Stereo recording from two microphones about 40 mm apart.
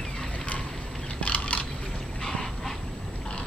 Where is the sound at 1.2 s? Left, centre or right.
Left.